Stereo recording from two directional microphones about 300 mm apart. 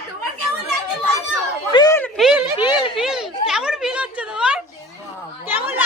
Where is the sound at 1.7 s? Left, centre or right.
Centre.